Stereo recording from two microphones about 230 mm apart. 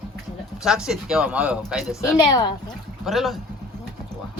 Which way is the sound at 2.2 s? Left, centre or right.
Centre.